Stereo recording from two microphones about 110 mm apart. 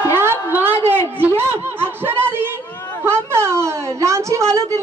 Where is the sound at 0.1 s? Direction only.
20° right (ahead or behind).